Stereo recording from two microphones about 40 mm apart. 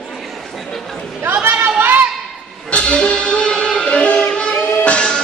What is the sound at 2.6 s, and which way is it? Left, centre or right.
Music, left.